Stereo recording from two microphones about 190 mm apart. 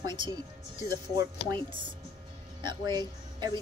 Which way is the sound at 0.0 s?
25° right (ahead or behind).